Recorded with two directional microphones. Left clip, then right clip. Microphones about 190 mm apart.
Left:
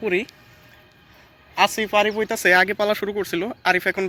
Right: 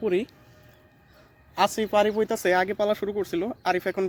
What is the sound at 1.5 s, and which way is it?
Speech, 25° right (ahead or behind).